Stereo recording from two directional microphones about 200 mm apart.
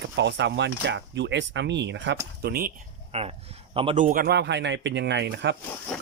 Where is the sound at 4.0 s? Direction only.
45° right (ahead or behind).